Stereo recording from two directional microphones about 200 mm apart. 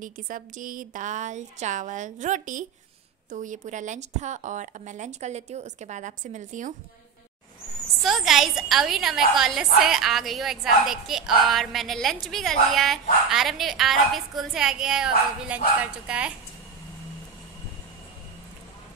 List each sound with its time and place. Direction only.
0.0 s a woman's voice: 40° right (ahead or behind)
8.0 s a woman's voice: centre (ahead or behind)